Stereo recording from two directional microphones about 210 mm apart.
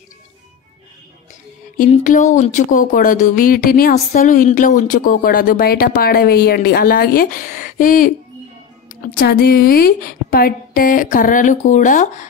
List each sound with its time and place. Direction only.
1.8 s speech: 35° left (ahead or behind)